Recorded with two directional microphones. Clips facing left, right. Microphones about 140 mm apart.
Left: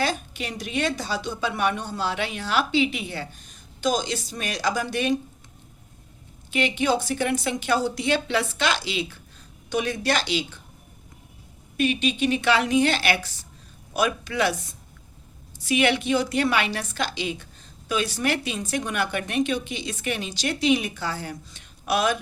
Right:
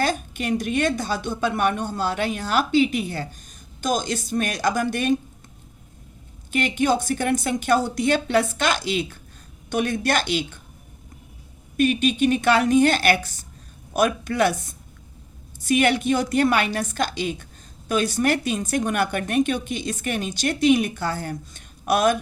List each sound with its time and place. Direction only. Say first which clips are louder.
0.0 s a woman's voice: right 3 dB; 50° right (ahead or behind)
6.5 s a woman's voice: right 2 dB; 45° right (ahead or behind)
11.8 s a woman's voice: right 4 dB; 45° right (ahead or behind)
15.6 s a woman's voice: right 3 dB; 45° right (ahead or behind)